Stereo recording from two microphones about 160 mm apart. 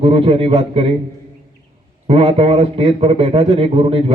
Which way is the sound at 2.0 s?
40° right (ahead or behind).